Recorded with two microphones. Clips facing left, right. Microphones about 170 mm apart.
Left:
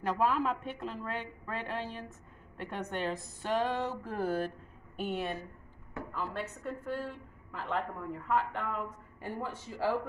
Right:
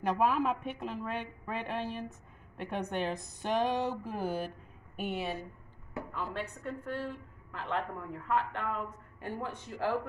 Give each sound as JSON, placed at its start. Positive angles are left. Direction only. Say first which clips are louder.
{"t": 0.0, "sound": "a woman's voice", "louder": "right 1 dB", "side_deg": -15}
{"t": 6.6, "sound": "a woman's voice", "louder": "left 1 dB", "side_deg": 10}